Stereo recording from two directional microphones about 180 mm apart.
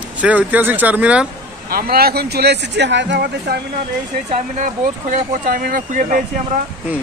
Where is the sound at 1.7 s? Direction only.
55° right (ahead or behind).